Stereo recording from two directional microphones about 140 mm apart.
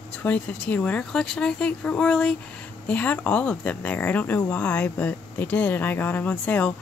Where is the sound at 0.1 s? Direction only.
10° left (ahead or behind).